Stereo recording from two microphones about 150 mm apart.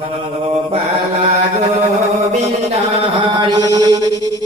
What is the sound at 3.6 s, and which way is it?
Music, 25° right (ahead or behind).